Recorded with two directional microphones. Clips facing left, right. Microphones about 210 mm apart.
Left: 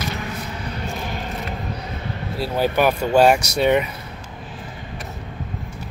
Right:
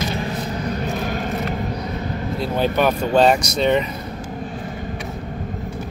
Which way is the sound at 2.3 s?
5° left (ahead or behind).